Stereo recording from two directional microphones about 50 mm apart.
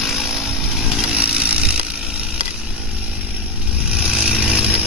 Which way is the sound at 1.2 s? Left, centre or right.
Right.